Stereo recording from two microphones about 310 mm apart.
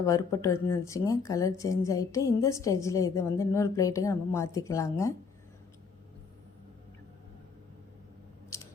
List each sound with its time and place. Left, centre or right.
0.0 s speech: centre
8.5 s scissors: centre